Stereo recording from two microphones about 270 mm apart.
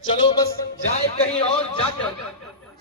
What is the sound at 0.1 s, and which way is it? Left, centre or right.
A man's voice, centre.